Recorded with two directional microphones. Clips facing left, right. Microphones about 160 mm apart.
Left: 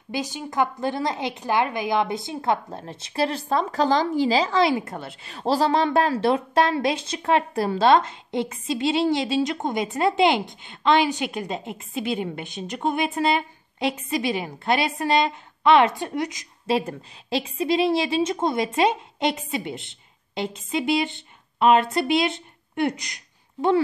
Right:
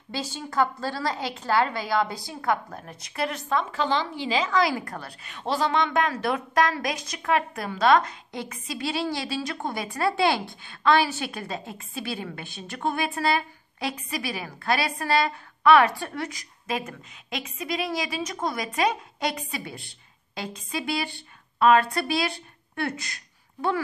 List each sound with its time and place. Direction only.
0.1 s a woman's voice: 15° left (ahead or behind)
16.6 s a woman's voice: 30° left (ahead or behind)